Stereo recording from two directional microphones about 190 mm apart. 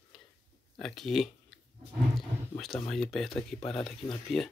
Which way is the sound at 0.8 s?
Centre (ahead or behind).